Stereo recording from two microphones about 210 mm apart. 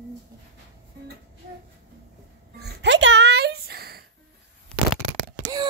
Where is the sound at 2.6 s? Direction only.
55° right (ahead or behind).